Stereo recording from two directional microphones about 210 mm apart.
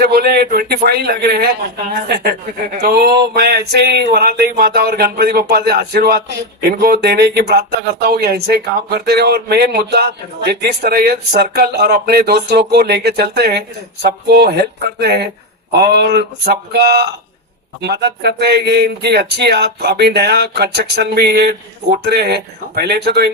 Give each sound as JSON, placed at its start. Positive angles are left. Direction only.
{"t": 0.0, "sound": "speech", "side_deg": -50}